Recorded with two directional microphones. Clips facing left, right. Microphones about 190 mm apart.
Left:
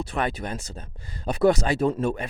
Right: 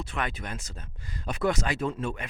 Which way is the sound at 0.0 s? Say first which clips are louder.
Left 6 dB; 35° left (ahead or behind).